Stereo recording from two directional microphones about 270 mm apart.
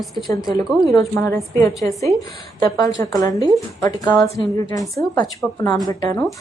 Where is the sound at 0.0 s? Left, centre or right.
Centre.